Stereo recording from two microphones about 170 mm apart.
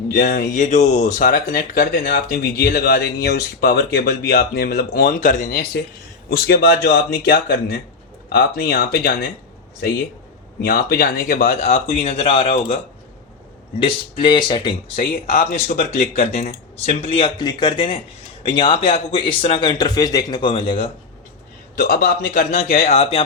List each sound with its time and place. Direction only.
0.1 s speech: 65° left (ahead or behind)
0.6 s speech: 45° left (ahead or behind); by 9.3 s 65° left (ahead or behind)
10.6 s speech: 65° left (ahead or behind); by 14.8 s 30° left (ahead or behind)
14.9 s speech: 55° left (ahead or behind); by 20.9 s 35° left (ahead or behind)
21.8 s speech: 60° left (ahead or behind)
22.8 s speech: 40° left (ahead or behind)